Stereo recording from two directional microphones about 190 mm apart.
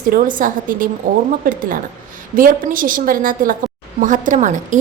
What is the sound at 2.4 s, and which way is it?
A woman's voice, 45° right (ahead or behind).